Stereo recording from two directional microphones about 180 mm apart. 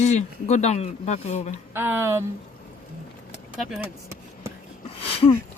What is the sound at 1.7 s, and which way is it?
Speech, 15° right (ahead or behind).